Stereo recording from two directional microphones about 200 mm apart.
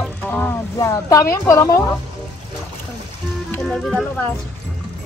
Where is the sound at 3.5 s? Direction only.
5° left (ahead or behind).